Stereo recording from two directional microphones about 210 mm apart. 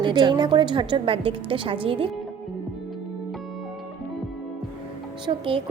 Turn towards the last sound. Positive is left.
turn(degrees=-25)  # may be behind; listen again after turning